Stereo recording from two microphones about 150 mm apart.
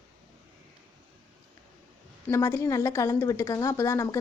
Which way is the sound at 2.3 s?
20° left (ahead or behind).